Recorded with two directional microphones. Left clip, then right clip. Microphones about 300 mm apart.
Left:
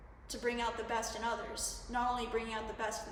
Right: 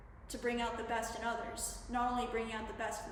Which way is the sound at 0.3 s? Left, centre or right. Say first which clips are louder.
Left 1 dB; centre.